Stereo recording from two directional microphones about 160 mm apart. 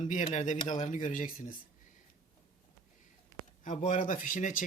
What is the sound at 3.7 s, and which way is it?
Speech, 50° left (ahead or behind).